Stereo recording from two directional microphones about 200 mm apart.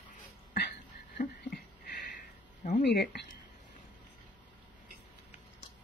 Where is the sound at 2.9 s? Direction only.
55° left (ahead or behind).